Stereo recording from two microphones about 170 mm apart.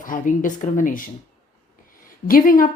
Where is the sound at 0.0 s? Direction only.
50° left (ahead or behind).